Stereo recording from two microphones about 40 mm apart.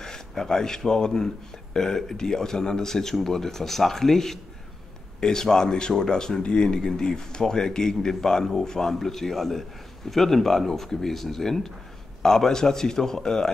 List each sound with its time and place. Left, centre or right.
0.0 s speech: centre